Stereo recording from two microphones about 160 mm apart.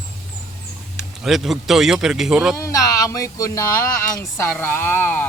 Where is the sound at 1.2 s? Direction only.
Centre (ahead or behind).